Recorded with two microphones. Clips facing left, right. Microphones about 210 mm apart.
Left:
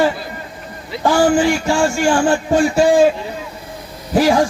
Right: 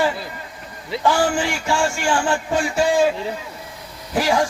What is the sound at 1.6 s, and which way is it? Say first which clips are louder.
A man's voice: left 5 dB; 40° left (ahead or behind).